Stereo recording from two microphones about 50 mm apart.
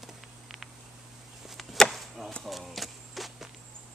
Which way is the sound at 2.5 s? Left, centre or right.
Centre.